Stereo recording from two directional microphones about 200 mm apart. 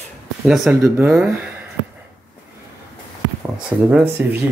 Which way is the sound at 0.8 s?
15° right (ahead or behind).